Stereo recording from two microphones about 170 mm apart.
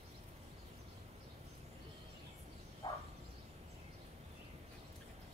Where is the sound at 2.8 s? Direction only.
30° left (ahead or behind).